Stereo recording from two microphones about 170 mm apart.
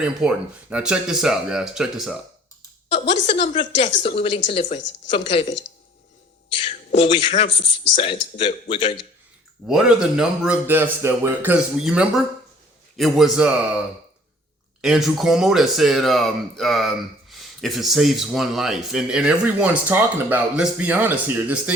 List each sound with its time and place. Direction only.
0.0 s speech: 5° right (ahead or behind)
3.4 s speech: 40° left (ahead or behind)
6.6 s a man's voice: 35° left (ahead or behind)
7.5 s speech: 90° left
7.9 s speech: 30° left (ahead or behind)
9.6 s a man's voice: 5° right (ahead or behind)
14.8 s speech: centre (ahead or behind)